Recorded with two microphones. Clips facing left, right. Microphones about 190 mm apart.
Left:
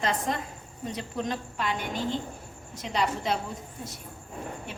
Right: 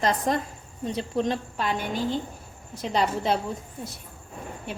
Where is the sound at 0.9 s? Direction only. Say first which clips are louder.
Right 6 dB; 30° right (ahead or behind).